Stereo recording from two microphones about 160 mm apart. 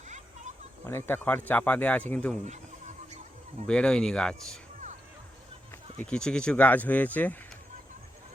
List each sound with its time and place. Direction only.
0.9 s speech: 15° left (ahead or behind)
2.4 s fowl: 45° right (ahead or behind)
3.7 s speech: 5° left (ahead or behind)
5.7 s speech: 10° left (ahead or behind)